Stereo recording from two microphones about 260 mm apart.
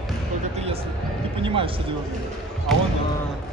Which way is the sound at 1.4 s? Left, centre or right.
Centre.